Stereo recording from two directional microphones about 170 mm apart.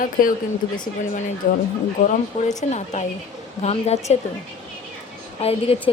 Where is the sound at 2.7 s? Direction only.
40° left (ahead or behind).